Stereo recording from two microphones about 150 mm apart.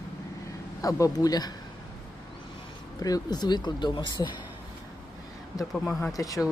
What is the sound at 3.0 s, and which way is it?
Speech, 25° left (ahead or behind).